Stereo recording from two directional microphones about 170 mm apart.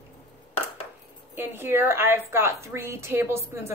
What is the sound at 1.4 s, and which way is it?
A woman's voice, 15° right (ahead or behind).